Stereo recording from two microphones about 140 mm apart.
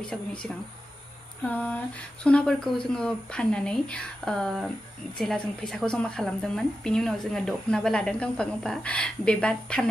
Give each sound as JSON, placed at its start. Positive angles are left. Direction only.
{"t": 0.0, "sound": "a woman's voice", "side_deg": 5}